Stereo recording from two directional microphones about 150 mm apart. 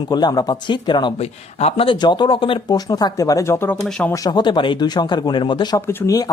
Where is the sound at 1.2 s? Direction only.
45° left (ahead or behind); by 3.8 s 15° left (ahead or behind).